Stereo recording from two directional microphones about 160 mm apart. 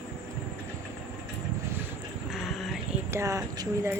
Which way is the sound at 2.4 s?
Centre (ahead or behind).